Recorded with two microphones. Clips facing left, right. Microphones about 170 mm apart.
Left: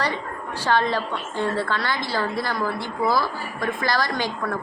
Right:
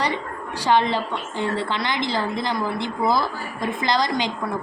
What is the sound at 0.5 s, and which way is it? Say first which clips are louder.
A woman's voice: right 2 dB; 15° right (ahead or behind).